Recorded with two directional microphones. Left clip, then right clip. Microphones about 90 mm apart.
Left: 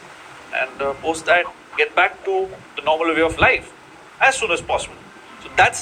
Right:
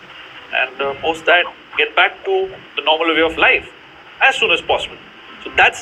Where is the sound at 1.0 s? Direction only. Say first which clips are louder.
Right 4 dB; 50° left (ahead or behind).